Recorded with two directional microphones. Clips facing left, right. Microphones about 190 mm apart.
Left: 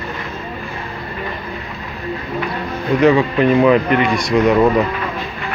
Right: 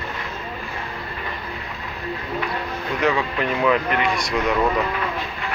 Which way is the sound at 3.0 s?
35° left (ahead or behind).